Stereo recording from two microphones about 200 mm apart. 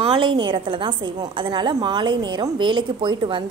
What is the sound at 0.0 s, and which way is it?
A woman's voice, 25° right (ahead or behind).